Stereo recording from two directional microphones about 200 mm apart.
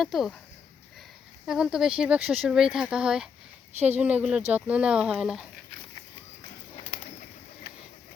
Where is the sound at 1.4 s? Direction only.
Centre (ahead or behind).